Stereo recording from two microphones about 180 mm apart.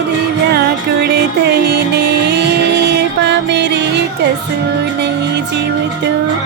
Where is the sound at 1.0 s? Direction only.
65° right (ahead or behind).